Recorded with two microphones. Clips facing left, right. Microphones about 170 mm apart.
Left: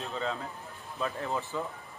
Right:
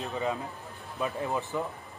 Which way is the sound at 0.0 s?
15° right (ahead or behind).